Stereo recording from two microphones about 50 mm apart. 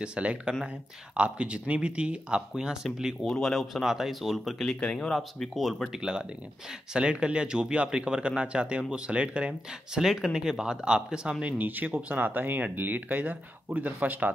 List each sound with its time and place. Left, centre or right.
0.0 s speech: right
3.3 s speech: centre
5.9 s speech: centre
9.9 s speech: centre
11.4 s speech: right
13.2 s speech: right